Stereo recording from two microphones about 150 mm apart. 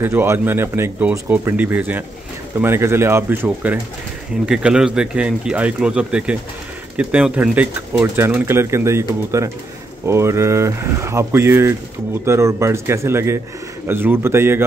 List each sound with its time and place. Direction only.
0.0 s speech: 15° right (ahead or behind)